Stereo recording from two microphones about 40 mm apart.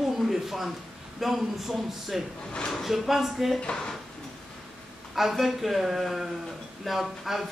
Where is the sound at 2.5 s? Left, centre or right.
Centre.